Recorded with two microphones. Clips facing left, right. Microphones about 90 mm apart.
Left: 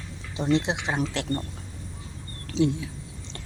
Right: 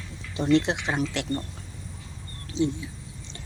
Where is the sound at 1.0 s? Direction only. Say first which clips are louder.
Even; 35° left (ahead or behind).